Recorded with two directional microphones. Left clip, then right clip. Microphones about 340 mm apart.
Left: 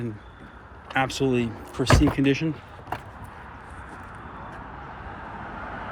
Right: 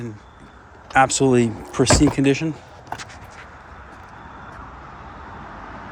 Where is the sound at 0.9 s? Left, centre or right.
Centre.